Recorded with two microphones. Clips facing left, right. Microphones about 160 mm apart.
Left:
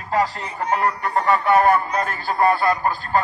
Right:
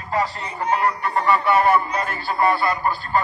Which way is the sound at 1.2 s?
45° left (ahead or behind).